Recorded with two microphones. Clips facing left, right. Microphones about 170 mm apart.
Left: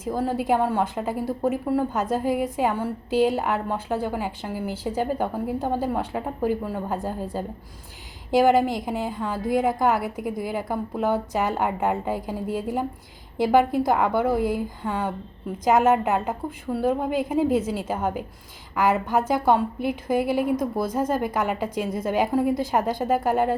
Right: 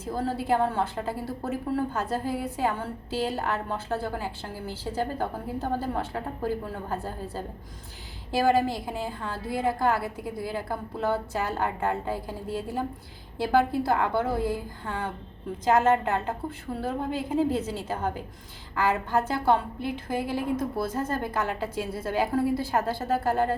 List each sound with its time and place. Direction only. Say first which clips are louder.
0.0 s a woman's voice: left 4 dB; 15° left (ahead or behind)